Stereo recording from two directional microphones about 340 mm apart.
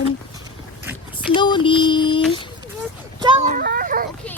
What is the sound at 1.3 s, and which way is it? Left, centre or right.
Child singing, centre.